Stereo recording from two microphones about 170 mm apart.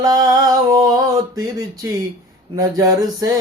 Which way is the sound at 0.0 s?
25° right (ahead or behind).